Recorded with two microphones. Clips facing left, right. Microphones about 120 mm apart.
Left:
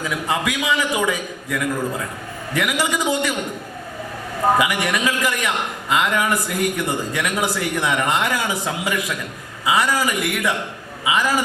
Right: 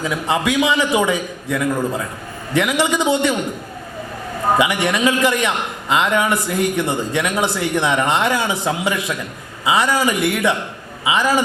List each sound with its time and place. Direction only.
0.3 s a man's voice: 25° right (ahead or behind)
4.5 s a man's voice: 25° right (ahead or behind)